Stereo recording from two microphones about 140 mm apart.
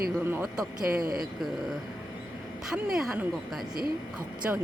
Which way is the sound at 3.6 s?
90° right.